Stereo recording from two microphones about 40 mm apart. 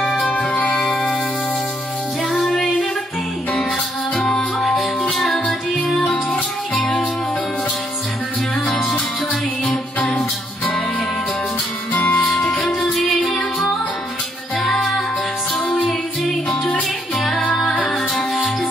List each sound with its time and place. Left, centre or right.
0.2 s music: left
0.7 s music: centre
2.5 s music: left
4.6 s music: centre
6.0 s music: left
9.3 s music: left
11.9 s music: left
12.2 s music: centre
14.6 s music: centre